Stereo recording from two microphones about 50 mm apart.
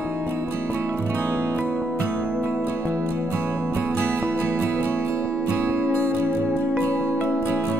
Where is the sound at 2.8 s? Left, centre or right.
Right.